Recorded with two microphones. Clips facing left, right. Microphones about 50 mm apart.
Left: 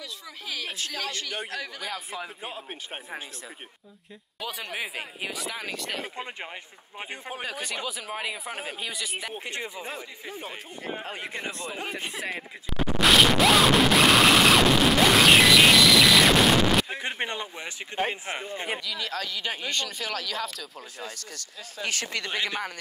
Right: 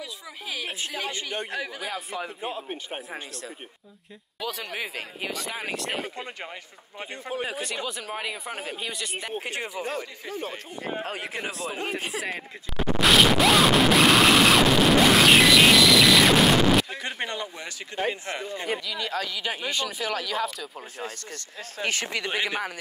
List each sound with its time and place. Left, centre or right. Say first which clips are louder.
0.0 s a man's voice: right 2 dB; centre
5.6 s speech: right 3 dB; right
7.0 s a man's voice: right 4 dB; centre
7.8 s speech: right 1 dB; centre
9.3 s speech: right 4 dB; centre
9.8 s a man's voice: right 5 dB; centre
10.8 s speech: right 3 dB; centre
11.9 s a sound: right 2 dB; centre
16.9 s speech: left 1 dB; left
18.9 s speech: right 2 dB; centre
21.8 s speech: right 3 dB; right
22.1 s speech: right 2 dB; centre